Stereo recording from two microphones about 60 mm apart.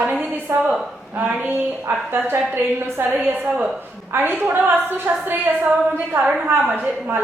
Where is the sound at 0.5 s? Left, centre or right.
Right.